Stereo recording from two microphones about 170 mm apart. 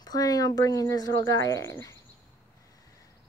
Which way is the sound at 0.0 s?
20° left (ahead or behind).